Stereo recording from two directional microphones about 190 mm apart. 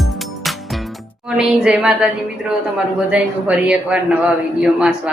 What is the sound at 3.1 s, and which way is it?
Speech, 5° right (ahead or behind).